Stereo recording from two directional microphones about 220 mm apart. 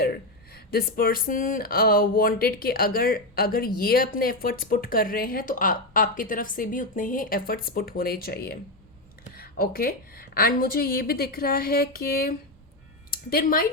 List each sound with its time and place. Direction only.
0.5 s a woman's voice: 45° left (ahead or behind)